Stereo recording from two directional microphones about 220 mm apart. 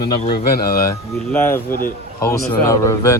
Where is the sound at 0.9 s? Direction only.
10° left (ahead or behind).